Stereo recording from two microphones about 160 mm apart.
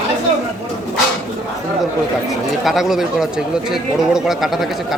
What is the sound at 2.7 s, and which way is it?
Speech, centre (ahead or behind).